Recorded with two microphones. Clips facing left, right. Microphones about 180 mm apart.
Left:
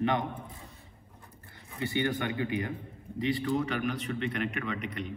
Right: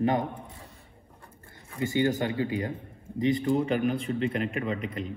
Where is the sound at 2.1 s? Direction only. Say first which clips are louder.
Right 4 dB; 30° right (ahead or behind).